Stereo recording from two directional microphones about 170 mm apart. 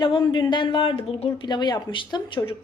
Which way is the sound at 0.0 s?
25° left (ahead or behind).